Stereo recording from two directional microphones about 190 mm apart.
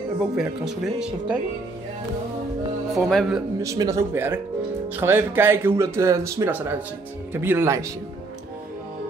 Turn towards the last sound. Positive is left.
turn(degrees=-10)  # may be behind; listen again after turning